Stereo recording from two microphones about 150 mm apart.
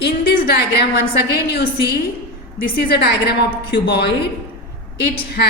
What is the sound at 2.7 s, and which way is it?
A woman's voice, 90° left.